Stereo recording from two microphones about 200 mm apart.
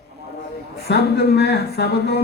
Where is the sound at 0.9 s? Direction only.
55° left (ahead or behind).